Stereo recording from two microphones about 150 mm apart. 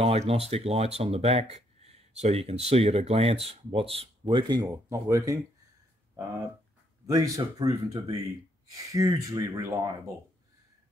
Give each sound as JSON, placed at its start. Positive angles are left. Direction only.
{"t": 0.0, "sound": "speech", "side_deg": -40}
{"t": 7.1, "sound": "speech", "side_deg": -20}